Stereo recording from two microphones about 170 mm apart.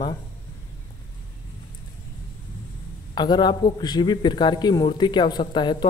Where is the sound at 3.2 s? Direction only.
25° left (ahead or behind).